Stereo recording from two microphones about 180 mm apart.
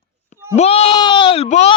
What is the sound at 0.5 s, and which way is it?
Speech, 35° left (ahead or behind).